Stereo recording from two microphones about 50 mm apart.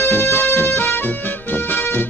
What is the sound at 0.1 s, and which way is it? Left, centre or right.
Music, left.